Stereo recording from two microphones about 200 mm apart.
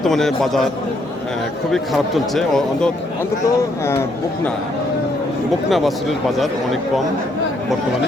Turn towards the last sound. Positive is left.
turn(degrees=0)  # may be behind; listen again after turning